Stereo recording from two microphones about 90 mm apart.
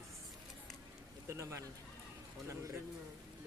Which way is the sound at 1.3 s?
35° right (ahead or behind).